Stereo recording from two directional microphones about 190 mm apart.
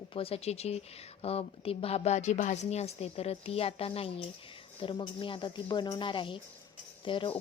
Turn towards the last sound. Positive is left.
turn(degrees=25)  # may be behind; listen again after turning